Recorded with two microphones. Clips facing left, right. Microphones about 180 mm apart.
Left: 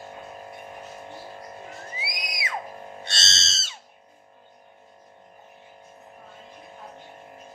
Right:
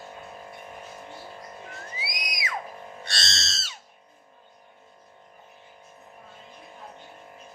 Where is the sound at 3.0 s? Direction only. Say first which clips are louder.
Right 3 dB; 25° left (ahead or behind).